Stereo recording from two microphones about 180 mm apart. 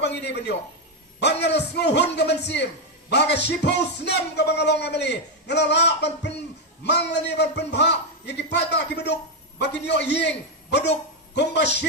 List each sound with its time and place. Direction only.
0.0 s a man's voice: 70° left (ahead or behind)